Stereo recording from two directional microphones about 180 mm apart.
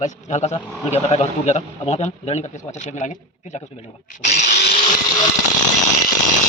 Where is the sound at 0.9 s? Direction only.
35° left (ahead or behind).